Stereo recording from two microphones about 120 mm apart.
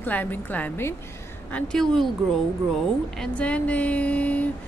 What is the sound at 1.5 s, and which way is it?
Speech, 5° left (ahead or behind).